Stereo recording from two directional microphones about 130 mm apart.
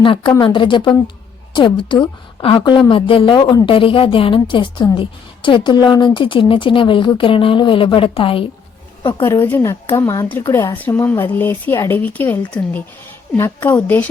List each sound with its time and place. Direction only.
0.0 s a woman's voice: 40° left (ahead or behind)
9.2 s a woman's voice: 20° left (ahead or behind)